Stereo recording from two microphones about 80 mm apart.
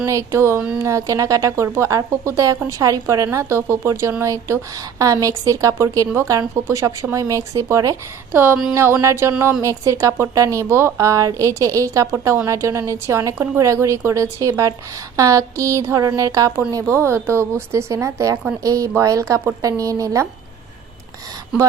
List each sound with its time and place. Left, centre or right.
0.0 s a woman's voice: right
8.3 s a woman's voice: right
16.9 s a woman's voice: right